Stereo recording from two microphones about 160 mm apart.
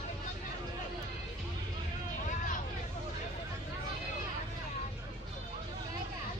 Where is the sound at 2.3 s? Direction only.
50° left (ahead or behind).